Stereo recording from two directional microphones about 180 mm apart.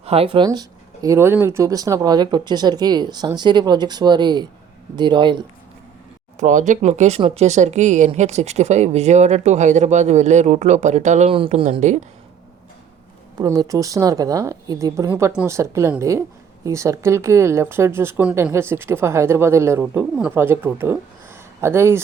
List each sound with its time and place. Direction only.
0.0 s speech: 35° right (ahead or behind)
6.4 s speech: 45° right (ahead or behind)
13.4 s speech: 20° right (ahead or behind)